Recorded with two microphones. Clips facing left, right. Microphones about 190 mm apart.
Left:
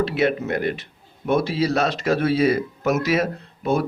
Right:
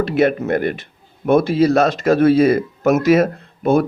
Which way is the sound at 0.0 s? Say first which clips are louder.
Right 5 dB; 50° right (ahead or behind).